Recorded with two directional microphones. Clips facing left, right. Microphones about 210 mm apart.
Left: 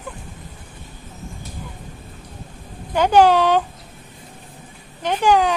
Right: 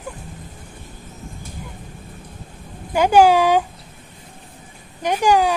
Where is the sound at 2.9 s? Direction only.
10° right (ahead or behind).